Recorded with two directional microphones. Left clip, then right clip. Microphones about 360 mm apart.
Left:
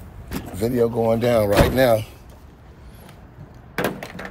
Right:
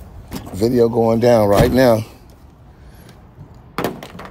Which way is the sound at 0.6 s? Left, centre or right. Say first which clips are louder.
Right 6 dB; centre.